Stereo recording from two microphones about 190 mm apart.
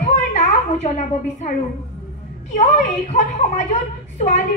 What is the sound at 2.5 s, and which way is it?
Speech, 40° left (ahead or behind).